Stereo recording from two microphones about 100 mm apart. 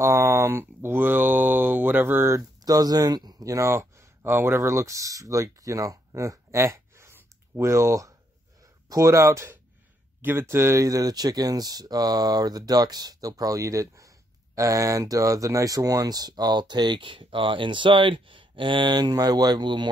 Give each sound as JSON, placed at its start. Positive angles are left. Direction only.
{"t": 0.0, "sound": "speech", "side_deg": -30}
{"t": 2.6, "sound": "speech", "side_deg": -40}